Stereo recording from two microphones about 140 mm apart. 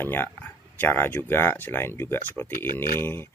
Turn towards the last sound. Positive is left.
turn(degrees=15)  # may be behind; listen again after turning